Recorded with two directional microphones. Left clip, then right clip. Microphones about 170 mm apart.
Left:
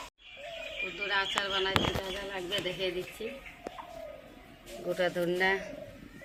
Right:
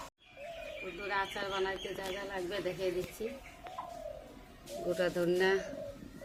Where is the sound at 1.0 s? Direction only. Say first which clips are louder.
Left 5 dB; 15° right (ahead or behind).